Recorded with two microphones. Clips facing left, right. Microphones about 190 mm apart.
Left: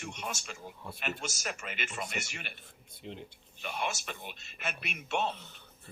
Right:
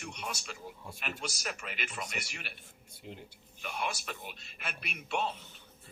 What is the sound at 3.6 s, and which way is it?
Speech, centre (ahead or behind).